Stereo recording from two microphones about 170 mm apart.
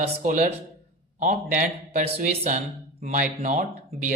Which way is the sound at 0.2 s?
45° right (ahead or behind).